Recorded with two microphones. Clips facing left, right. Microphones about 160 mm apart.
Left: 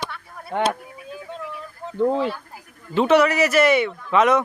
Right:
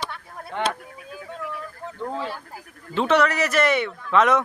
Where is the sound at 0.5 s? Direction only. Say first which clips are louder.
Left 5 dB; 50° left (ahead or behind).